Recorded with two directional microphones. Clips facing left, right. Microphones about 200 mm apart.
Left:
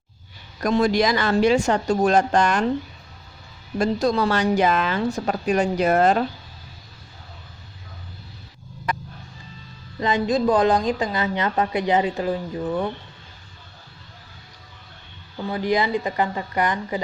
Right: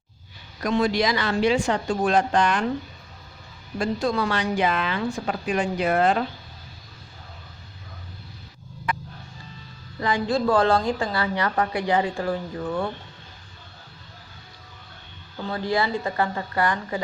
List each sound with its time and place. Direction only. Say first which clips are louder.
0.6 s a woman's voice: left 3 dB; 45° left (ahead or behind)
3.8 s speech: left 4 dB; 40° left (ahead or behind)
8.9 s music: left 1 dB; 40° left (ahead or behind)
10.0 s a woman's voice: left 3 dB; 20° left (ahead or behind)
15.4 s a woman's voice: left 3 dB; 15° left (ahead or behind)